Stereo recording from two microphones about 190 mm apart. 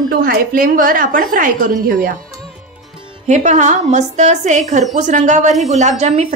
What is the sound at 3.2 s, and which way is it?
A woman's voice, 40° right (ahead or behind).